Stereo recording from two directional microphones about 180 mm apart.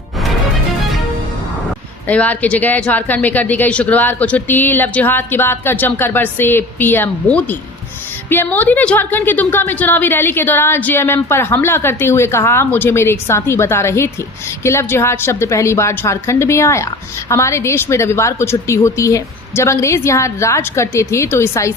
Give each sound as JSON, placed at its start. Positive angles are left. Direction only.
{"t": 2.0, "sound": "a woman's voice", "side_deg": 10}